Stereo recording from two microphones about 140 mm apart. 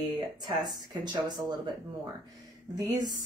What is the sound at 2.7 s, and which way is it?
Speech, 30° right (ahead or behind).